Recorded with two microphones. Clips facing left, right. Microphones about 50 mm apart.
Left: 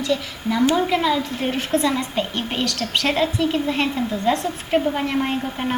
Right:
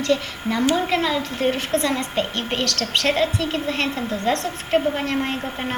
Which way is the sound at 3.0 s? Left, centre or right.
Left.